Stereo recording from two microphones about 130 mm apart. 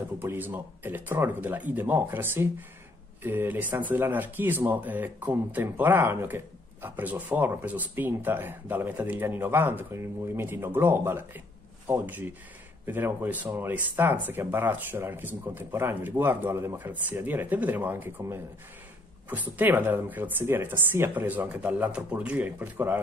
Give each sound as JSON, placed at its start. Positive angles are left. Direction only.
{"t": 0.2, "sound": "speech", "side_deg": -15}